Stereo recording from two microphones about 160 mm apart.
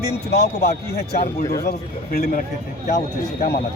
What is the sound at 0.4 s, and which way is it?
Speech, 90° left.